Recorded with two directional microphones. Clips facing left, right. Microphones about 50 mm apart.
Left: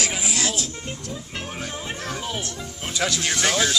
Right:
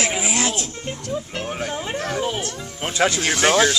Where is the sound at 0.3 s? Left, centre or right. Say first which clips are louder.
Right 3 dB; right.